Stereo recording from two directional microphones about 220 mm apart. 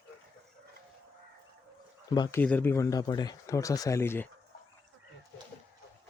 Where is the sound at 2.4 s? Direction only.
10° left (ahead or behind).